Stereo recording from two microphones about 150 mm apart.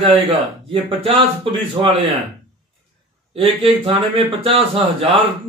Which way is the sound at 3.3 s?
40° right (ahead or behind).